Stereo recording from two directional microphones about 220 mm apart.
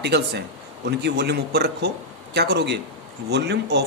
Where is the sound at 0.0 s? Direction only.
50° right (ahead or behind).